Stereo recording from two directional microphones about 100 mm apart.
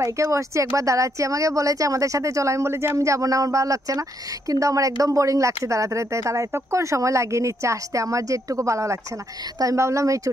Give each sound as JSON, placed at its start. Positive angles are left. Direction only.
{"t": 0.0, "sound": "speech", "side_deg": -30}